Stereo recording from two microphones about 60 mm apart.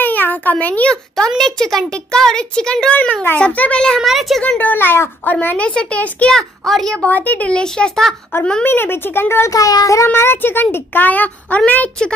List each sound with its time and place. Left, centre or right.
0.0 s a sound: left
1.4 s a child's voice: centre
2.9 s a child's voice: left
4.0 s a child's voice: centre
4.4 s a child's voice: centre
4.6 s a child's voice: left
5.2 s a child's voice: left
6.3 s a child's voice: centre
7.0 s a child's voice: left; by 8.1 s centre
8.6 s a child's voice: left
9.5 s child singing: left
10.0 s a child's voice: left